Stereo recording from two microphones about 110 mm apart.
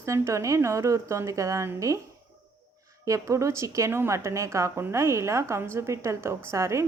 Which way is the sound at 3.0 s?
30° right (ahead or behind).